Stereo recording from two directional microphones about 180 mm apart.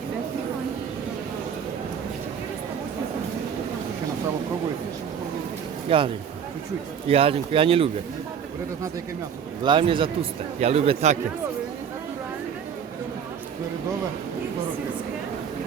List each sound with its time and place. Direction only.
5.9 s a man's voice: 30° right (ahead or behind)
7.1 s speech: 30° right (ahead or behind)
9.6 s a man's voice: 25° right (ahead or behind)